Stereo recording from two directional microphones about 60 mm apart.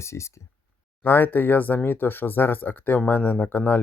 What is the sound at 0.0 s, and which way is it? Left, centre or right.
Speech, left.